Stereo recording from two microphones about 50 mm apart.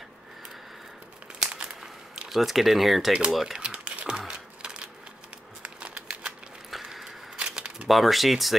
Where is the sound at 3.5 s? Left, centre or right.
Centre.